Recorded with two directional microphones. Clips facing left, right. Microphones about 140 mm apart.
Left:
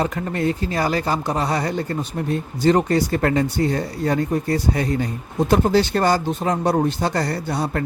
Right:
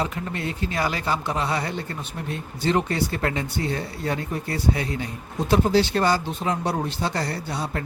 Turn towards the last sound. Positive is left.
turn(degrees=50)  # may be behind; listen again after turning